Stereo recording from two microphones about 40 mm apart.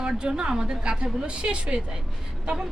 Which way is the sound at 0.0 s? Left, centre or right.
Right.